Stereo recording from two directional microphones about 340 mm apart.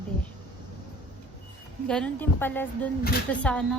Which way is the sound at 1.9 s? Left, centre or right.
Centre.